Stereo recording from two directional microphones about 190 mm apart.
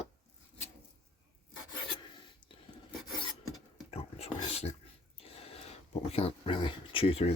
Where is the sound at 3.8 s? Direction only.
30° left (ahead or behind).